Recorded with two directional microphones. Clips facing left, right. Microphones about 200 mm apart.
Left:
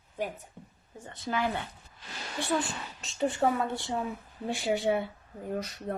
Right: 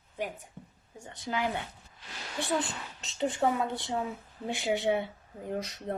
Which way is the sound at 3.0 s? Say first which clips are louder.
Left 1 dB; 20° right (ahead or behind).